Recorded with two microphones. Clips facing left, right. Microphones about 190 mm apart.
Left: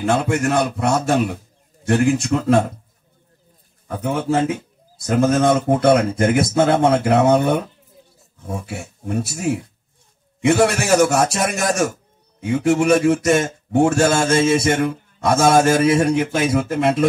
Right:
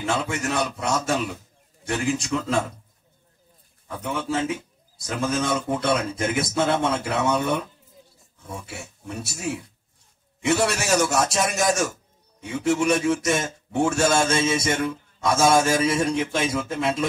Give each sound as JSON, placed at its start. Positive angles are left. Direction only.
{"t": 0.0, "sound": "a man's voice", "side_deg": 55}
{"t": 3.9, "sound": "a man's voice", "side_deg": 55}